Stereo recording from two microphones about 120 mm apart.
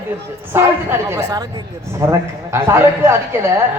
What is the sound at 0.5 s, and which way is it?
A man's voice, 20° right (ahead or behind).